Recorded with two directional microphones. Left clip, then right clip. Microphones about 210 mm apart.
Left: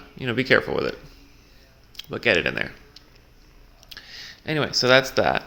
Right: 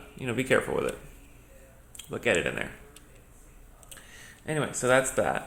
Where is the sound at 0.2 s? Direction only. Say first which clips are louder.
Left 6 dB; 40° left (ahead or behind).